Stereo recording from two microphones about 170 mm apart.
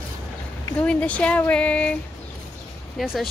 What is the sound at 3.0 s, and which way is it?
Speech, centre (ahead or behind).